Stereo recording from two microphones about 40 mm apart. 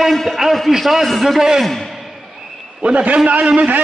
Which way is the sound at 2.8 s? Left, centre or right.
Right.